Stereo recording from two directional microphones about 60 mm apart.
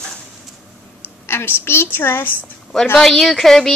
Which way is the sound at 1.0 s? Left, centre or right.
Left.